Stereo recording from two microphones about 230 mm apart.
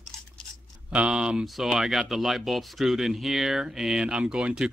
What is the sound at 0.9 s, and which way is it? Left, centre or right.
Speech, centre.